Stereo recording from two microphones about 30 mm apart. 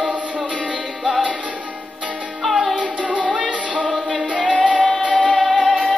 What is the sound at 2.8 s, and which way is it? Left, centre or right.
Music, right.